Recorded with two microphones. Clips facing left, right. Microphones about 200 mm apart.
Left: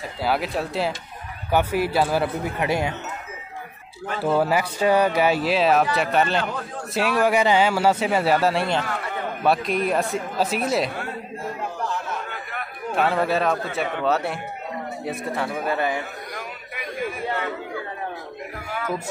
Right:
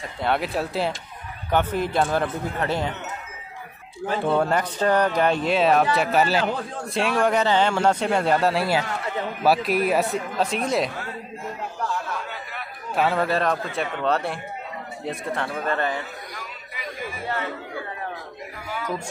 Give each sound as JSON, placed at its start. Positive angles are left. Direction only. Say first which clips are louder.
{"t": 0.2, "sound": "speech", "louder": "even", "side_deg": 0}
{"t": 4.2, "sound": "speech", "louder": "left 2 dB", "side_deg": 5}
{"t": 12.9, "sound": "speech", "louder": "left 1 dB", "side_deg": 0}
{"t": 16.3, "sound": "a sound", "louder": "left 4 dB", "side_deg": 50}